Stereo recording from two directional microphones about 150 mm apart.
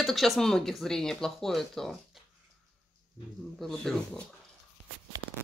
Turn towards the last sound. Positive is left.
turn(degrees=5)  # may be behind; listen again after turning